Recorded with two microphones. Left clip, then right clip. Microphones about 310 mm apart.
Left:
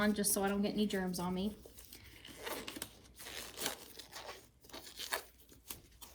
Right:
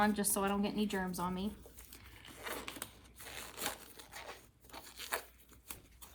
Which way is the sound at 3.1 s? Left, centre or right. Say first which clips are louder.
Left 1 dB; centre.